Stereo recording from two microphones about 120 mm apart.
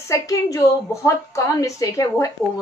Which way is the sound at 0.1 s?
30° left (ahead or behind).